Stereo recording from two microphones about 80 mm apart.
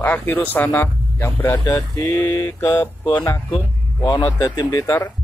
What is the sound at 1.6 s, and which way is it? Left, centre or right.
Speech, left.